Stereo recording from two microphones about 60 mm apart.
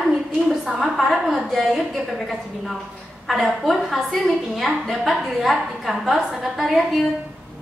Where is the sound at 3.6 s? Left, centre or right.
Centre.